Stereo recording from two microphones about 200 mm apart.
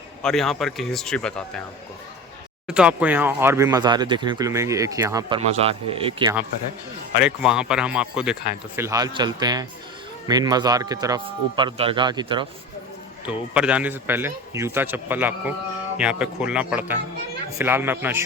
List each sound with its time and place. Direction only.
0.2 s speech: 5° left (ahead or behind)
2.6 s speech: 5° right (ahead or behind)
5.4 s a man's voice: 30° right (ahead or behind)
7.2 s a man's voice: 5° right (ahead or behind); by 12.5 s 25° right (ahead or behind)
13.2 s speech: 5° right (ahead or behind)